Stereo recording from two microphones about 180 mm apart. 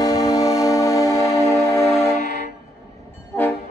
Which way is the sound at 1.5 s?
15° left (ahead or behind).